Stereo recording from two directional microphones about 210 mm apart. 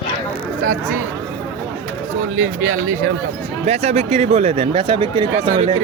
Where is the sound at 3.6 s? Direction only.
30° right (ahead or behind).